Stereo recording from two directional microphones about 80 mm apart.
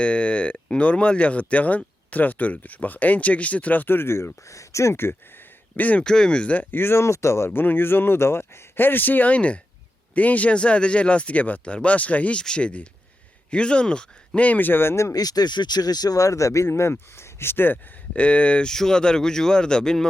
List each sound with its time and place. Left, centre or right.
0.0 s speech: centre; by 5.1 s left
5.7 s speech: centre
6.1 s speech: centre; by 15.1 s left
15.1 s speech: left
18.1 s speech: centre